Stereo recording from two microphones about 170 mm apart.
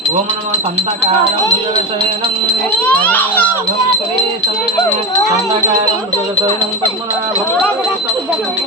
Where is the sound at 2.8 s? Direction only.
10° left (ahead or behind).